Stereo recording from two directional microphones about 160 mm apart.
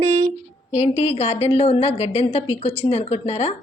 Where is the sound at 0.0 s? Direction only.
45° right (ahead or behind).